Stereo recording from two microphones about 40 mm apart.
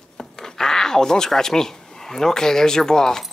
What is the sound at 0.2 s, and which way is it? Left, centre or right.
Speech, centre.